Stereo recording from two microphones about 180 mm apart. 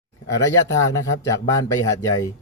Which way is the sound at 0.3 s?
15° left (ahead or behind).